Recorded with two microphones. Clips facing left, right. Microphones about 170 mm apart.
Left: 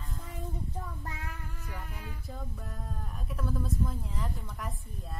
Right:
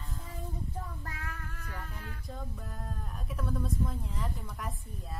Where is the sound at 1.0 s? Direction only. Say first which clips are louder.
Left 1 dB; 15° left (ahead or behind).